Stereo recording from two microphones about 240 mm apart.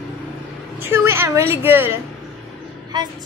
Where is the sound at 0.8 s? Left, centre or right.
Centre.